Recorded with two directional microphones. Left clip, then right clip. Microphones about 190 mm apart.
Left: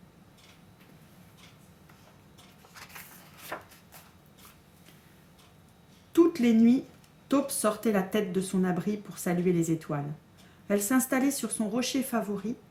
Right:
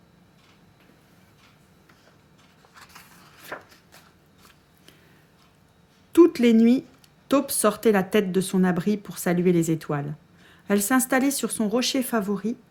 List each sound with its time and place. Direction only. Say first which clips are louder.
3.5 s chopping: right 2 dB; 10° right (ahead or behind)
6.1 s speech: right 6 dB; 55° right (ahead or behind)